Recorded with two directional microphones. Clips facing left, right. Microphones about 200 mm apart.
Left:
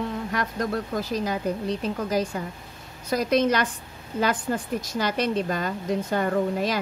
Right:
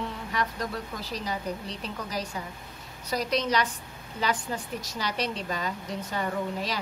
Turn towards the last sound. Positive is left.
turn(degrees=50)  # may be behind; listen again after turning